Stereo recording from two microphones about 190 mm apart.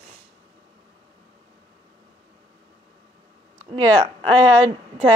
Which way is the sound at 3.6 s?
30° right (ahead or behind).